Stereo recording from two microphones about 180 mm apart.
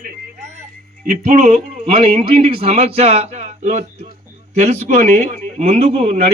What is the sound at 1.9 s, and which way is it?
Speech, 30° right (ahead or behind).